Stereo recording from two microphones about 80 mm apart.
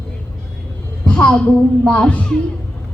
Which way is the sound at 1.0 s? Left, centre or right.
Centre.